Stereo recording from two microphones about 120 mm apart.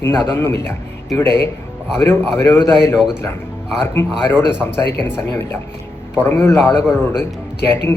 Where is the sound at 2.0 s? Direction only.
20° left (ahead or behind).